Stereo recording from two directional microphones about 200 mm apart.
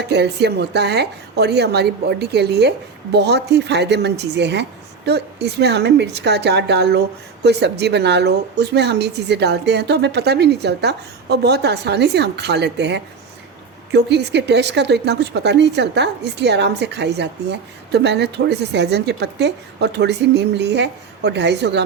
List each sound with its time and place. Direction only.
0.0 s a woman's voice: 55° right (ahead or behind)